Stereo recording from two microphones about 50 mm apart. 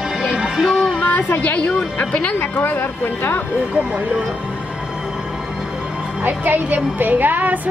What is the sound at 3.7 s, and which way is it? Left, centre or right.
Speech, right.